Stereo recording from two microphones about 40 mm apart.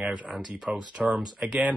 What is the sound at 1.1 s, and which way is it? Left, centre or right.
Speech, right.